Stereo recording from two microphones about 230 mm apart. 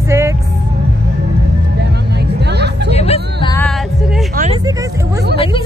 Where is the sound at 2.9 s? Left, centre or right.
Left.